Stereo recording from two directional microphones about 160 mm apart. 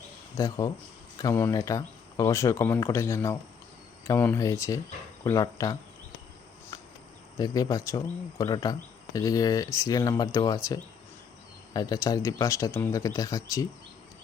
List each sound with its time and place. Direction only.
0.3 s speech: 20° left (ahead or behind)
6.7 s a sound: 25° left (ahead or behind)
7.3 s speech: 25° left (ahead or behind)